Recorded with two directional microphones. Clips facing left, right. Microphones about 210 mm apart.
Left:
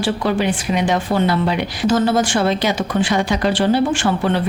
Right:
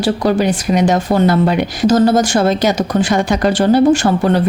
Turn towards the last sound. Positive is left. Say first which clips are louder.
# right 5 dB
turn(degrees=-40)  # may be behind; listen again after turning